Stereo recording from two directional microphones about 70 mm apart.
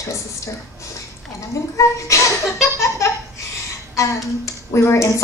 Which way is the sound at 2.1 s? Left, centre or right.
Left.